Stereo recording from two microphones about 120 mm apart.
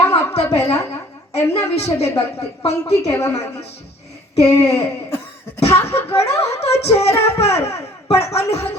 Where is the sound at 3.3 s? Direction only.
60° left (ahead or behind).